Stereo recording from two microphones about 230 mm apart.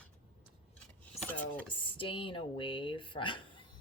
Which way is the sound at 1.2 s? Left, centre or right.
Centre.